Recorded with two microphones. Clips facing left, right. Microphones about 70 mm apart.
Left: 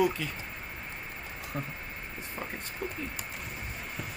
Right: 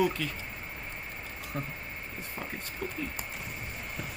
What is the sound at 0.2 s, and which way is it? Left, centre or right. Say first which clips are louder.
Speech: right 1 dB; centre.